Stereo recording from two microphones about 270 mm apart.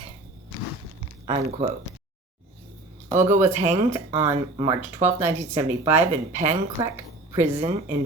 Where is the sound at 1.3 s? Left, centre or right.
Right.